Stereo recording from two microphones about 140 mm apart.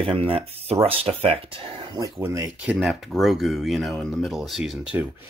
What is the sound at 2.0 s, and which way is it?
Speech, 20° right (ahead or behind).